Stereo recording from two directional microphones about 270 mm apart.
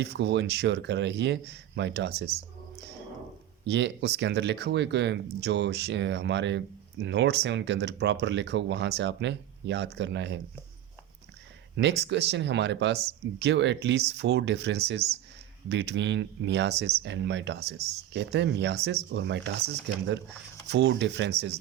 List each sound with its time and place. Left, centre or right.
0.0 s speech: right
3.7 s speech: right
11.8 s speech: right